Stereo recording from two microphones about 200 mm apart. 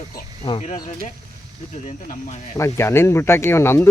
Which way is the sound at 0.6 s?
35° left (ahead or behind).